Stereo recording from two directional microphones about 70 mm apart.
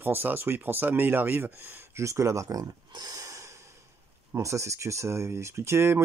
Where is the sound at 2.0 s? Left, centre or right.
Right.